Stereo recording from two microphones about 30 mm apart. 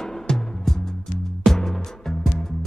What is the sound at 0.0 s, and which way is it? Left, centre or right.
Music, centre.